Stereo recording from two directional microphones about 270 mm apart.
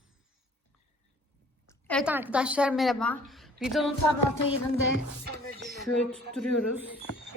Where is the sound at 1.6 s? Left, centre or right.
Centre.